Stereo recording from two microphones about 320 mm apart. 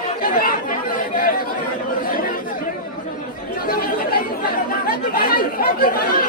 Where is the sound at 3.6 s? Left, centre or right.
Left.